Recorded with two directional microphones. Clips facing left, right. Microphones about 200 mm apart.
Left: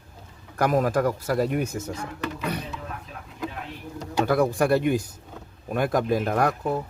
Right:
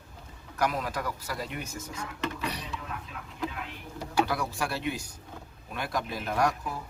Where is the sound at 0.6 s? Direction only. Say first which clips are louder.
Left 9 dB; 50° left (ahead or behind).